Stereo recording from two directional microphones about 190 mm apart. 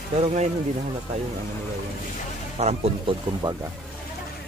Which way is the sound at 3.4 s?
25° right (ahead or behind).